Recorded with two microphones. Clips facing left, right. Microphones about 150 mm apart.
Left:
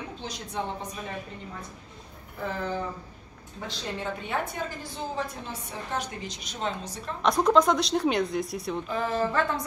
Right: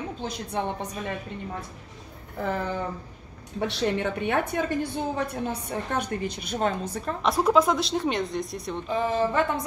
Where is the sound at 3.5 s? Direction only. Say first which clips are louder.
Right 9 dB; 70° right (ahead or behind).